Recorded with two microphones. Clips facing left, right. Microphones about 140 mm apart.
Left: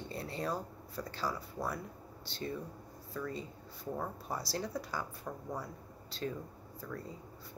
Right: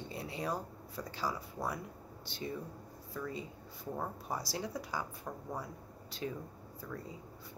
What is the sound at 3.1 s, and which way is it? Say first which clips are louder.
Speech: left 1 dB; 10° right (ahead or behind).